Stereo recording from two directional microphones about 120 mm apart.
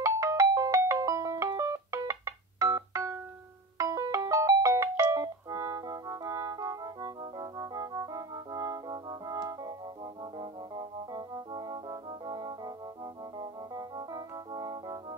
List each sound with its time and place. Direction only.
0.0 s music: 25° right (ahead or behind)
10.4 s organ: 35° right (ahead or behind)